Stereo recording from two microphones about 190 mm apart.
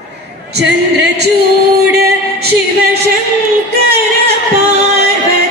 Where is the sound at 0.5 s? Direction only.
60° right (ahead or behind).